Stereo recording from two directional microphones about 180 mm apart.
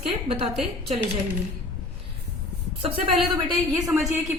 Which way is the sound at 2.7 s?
30° right (ahead or behind).